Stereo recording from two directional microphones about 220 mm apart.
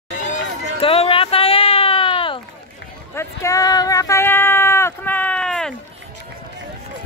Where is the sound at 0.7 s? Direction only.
25° left (ahead or behind); by 5.8 s 5° left (ahead or behind).